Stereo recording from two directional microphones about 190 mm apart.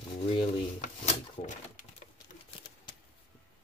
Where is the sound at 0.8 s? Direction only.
35° left (ahead or behind).